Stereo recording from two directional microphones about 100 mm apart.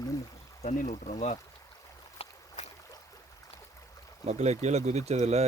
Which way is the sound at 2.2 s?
90° left.